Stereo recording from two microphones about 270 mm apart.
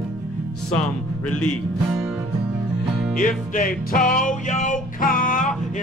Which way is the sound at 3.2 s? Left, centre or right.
Left.